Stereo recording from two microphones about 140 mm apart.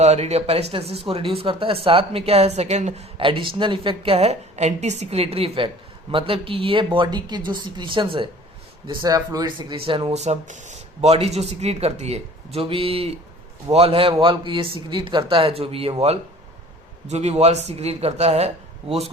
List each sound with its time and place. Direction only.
0.0 s speech: 50° right (ahead or behind)
3.2 s a woman's voice: 35° right (ahead or behind)
9.7 s a woman's voice: 40° right (ahead or behind)
10.2 s a woman's voice: 55° right (ahead or behind)